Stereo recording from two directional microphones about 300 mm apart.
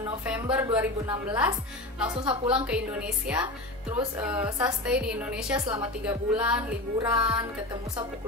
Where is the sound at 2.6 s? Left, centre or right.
Centre.